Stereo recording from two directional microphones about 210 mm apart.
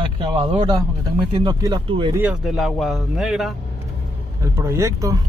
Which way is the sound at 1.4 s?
20° right (ahead or behind).